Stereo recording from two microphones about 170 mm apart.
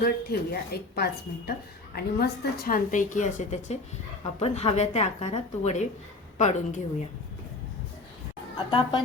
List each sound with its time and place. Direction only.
0.0 s a woman's voice: 65° left (ahead or behind); by 6.8 s 45° left (ahead or behind)
8.5 s a woman's voice: 25° left (ahead or behind)